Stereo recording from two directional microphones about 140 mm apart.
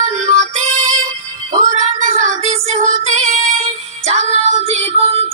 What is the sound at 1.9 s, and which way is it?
Music, 65° right (ahead or behind).